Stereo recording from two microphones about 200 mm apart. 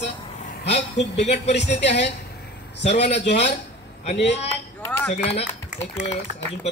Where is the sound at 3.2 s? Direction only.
30° left (ahead or behind).